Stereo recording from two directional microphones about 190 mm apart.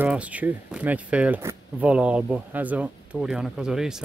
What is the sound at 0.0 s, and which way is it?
Speech, 5° right (ahead or behind).